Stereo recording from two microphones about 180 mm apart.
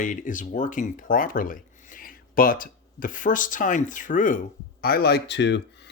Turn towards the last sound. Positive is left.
turn(degrees=75)  # may be behind; listen again after turning